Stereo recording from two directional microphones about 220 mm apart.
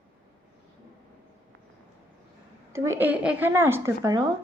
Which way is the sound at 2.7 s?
10° right (ahead or behind).